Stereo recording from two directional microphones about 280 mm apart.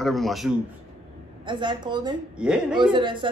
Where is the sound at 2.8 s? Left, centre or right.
Centre.